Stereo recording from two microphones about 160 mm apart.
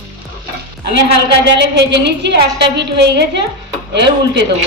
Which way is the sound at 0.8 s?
90° right.